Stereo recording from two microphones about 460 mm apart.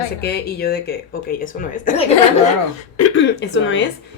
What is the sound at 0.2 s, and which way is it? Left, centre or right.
A woman's voice, left.